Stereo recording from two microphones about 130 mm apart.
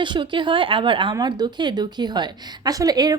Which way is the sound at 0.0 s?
40° right (ahead or behind).